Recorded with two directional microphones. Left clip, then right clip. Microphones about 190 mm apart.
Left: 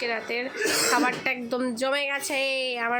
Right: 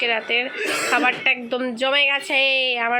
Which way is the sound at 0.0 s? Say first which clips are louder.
Right 8 dB; 10° left (ahead or behind).